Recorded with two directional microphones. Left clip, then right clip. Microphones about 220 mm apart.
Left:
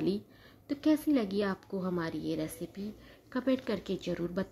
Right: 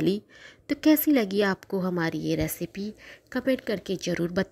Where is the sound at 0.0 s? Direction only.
35° right (ahead or behind).